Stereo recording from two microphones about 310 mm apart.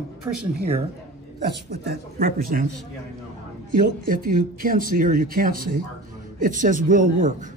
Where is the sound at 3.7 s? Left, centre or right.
Right.